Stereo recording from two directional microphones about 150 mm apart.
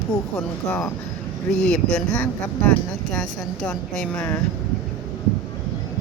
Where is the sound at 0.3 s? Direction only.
15° left (ahead or behind).